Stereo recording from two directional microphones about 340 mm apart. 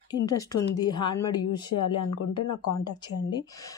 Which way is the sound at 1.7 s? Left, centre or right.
Left.